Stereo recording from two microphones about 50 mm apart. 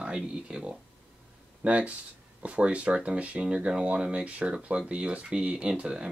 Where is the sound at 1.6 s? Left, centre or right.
Right.